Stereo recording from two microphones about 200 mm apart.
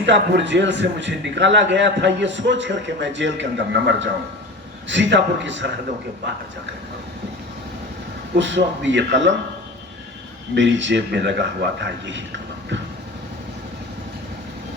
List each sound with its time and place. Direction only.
0.0 s a man's voice: 60° right (ahead or behind)
8.4 s a man's voice: 65° right (ahead or behind)
10.5 s a man's voice: 65° right (ahead or behind)